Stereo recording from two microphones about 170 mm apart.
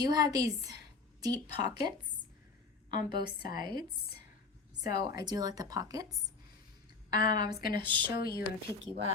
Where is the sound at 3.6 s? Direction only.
25° right (ahead or behind).